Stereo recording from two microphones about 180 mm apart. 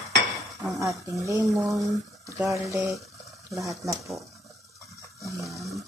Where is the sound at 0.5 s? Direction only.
20° right (ahead or behind).